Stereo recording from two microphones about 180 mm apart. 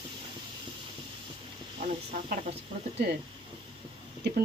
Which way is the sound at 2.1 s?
40° right (ahead or behind).